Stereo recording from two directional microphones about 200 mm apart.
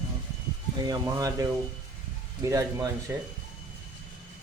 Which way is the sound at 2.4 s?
15° right (ahead or behind).